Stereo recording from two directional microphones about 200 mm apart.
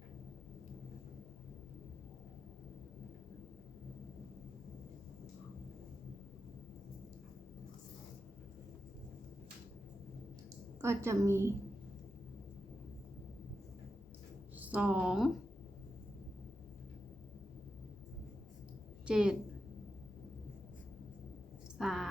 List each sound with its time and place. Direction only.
10.8 s a woman's voice: 15° right (ahead or behind)
14.6 s a woman's voice: 5° right (ahead or behind)
19.0 s a woman's voice: 5° right (ahead or behind)
21.8 s a sound: centre (ahead or behind)